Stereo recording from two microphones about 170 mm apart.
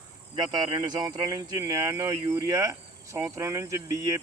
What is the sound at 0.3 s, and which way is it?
Speech, 25° right (ahead or behind).